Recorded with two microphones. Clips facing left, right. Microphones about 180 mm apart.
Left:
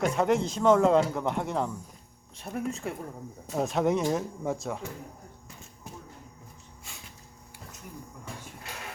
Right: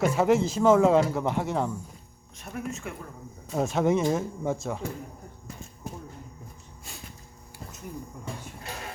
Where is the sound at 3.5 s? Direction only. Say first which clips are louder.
Right 2 dB; centre (ahead or behind).